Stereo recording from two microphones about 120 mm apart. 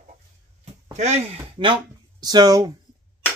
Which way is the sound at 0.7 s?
65° right (ahead or behind).